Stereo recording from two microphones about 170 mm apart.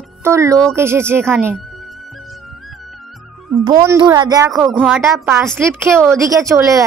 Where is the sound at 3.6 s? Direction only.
25° right (ahead or behind).